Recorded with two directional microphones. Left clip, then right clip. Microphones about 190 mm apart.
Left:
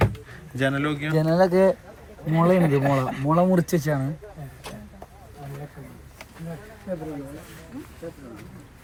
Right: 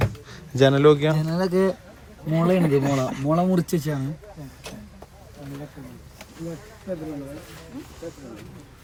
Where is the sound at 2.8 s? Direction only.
15° right (ahead or behind).